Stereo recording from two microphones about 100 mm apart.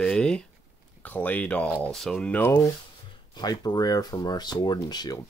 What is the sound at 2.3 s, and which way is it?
Speech, 15° left (ahead or behind).